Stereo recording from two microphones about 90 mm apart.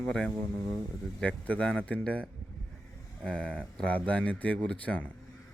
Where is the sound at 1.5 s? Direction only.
15° left (ahead or behind).